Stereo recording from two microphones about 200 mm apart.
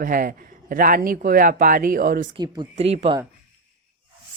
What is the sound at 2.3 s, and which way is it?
Speech, 20° right (ahead or behind).